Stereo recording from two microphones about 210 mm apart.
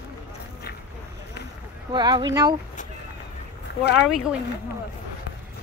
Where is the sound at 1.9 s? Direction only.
20° right (ahead or behind).